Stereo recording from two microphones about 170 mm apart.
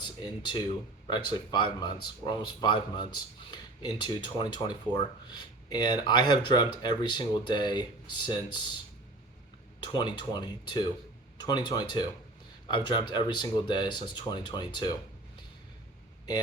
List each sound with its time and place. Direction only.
0.0 s speech: 25° left (ahead or behind)
9.8 s speech: 25° left (ahead or behind)